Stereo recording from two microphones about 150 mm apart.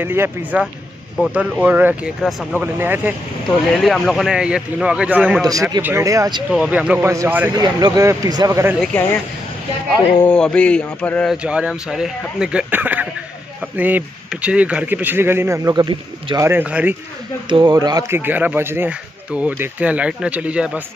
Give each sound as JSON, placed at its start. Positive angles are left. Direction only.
{"t": 0.0, "sound": "speech", "side_deg": -15}
{"t": 3.4, "sound": "speech", "side_deg": 0}
{"t": 6.5, "sound": "speech", "side_deg": -5}
{"t": 7.5, "sound": "speech", "side_deg": -25}
{"t": 10.2, "sound": "mantra", "side_deg": 5}
{"t": 11.4, "sound": "speech", "side_deg": -5}
{"t": 16.4, "sound": "speech", "side_deg": -10}
{"t": 17.5, "sound": "speech", "side_deg": -30}